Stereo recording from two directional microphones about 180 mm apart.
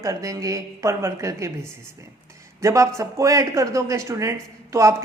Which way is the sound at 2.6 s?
15° right (ahead or behind).